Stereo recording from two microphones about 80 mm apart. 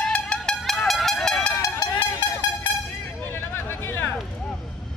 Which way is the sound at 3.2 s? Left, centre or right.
Left.